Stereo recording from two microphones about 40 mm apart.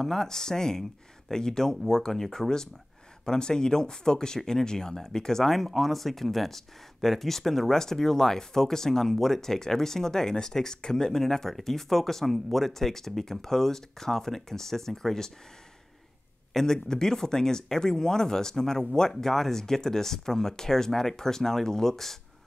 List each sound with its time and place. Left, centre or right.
0.0 s speech: centre
3.3 s speech: centre
16.5 s speech: centre